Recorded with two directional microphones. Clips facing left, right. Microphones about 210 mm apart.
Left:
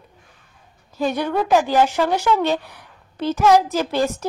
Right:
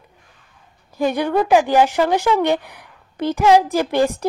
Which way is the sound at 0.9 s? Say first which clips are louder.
Right 3 dB; 10° right (ahead or behind).